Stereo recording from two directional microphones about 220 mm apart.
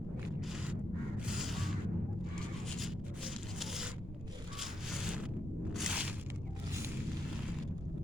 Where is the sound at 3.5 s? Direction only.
Centre (ahead or behind).